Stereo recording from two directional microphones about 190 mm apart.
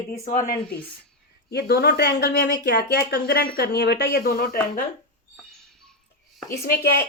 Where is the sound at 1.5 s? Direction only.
60° left (ahead or behind).